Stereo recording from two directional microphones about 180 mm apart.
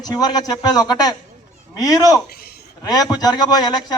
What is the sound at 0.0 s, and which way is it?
A man's voice, 20° left (ahead or behind).